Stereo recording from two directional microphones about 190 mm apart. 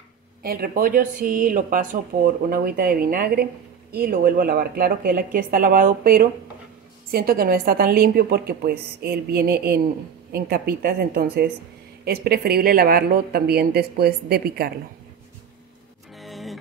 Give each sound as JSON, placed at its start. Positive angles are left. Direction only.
{"t": 0.4, "sound": "speech", "side_deg": -50}
{"t": 16.2, "sound": "music", "side_deg": 0}